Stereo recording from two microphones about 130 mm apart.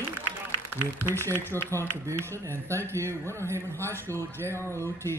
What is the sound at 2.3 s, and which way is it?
A man's voice, 20° right (ahead or behind).